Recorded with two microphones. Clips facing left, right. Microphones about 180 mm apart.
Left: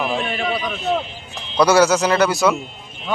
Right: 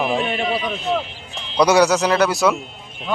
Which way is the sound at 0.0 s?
Centre (ahead or behind).